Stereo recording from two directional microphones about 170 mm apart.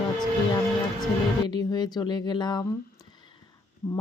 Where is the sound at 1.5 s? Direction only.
25° left (ahead or behind).